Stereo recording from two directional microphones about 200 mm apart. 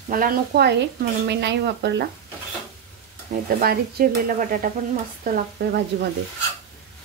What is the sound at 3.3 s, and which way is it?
Speech, 40° right (ahead or behind).